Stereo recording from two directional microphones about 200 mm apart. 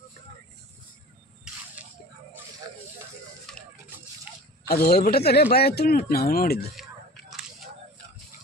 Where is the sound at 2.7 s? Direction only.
20° right (ahead or behind).